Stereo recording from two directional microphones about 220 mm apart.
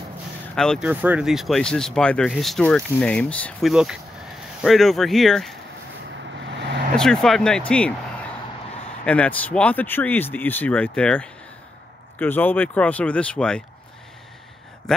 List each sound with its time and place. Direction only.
0.6 s speech: centre (ahead or behind)
6.4 s vehicle: 50° right (ahead or behind)
7.0 s speech: centre (ahead or behind)
9.0 s speech: 5° left (ahead or behind)